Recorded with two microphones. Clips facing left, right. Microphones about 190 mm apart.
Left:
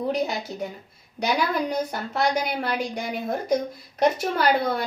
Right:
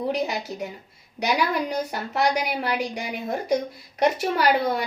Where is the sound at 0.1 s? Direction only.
5° right (ahead or behind).